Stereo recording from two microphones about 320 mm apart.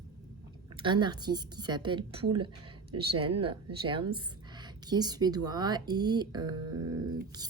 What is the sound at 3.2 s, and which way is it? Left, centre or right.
Speech, right.